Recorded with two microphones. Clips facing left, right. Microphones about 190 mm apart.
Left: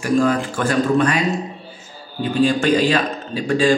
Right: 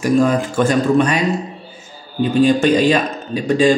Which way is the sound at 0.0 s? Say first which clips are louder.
Right 3 dB; 20° right (ahead or behind).